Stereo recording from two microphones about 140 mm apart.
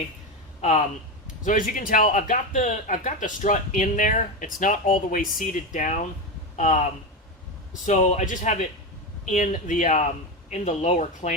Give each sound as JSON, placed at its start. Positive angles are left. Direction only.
{"t": 0.6, "sound": "speech", "side_deg": 55}
{"t": 1.5, "sound": "a man's voice", "side_deg": 70}